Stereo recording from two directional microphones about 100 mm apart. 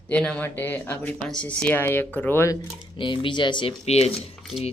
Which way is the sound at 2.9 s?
55° left (ahead or behind).